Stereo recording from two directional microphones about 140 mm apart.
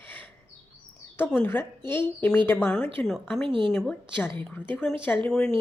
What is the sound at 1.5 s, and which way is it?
Speech, 15° left (ahead or behind).